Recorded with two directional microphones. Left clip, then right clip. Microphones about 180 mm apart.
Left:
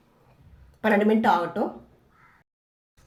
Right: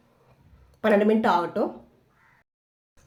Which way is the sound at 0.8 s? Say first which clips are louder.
Right 1 dB; 15° right (ahead or behind).